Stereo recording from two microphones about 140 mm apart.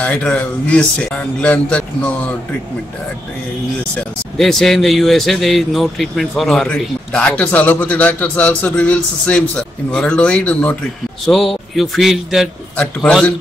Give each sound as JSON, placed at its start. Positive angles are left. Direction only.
{"t": 0.0, "sound": "speech", "side_deg": 10}
{"t": 3.9, "sound": "a man's voice", "side_deg": 0}